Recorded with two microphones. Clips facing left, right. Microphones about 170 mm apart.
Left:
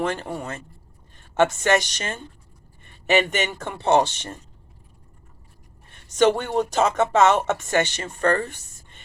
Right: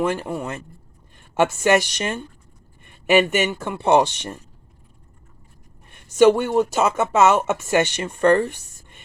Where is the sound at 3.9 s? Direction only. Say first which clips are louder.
Right 2 dB; 10° right (ahead or behind).